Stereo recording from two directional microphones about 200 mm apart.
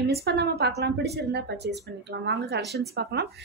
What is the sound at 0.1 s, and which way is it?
A woman's voice, 55° right (ahead or behind).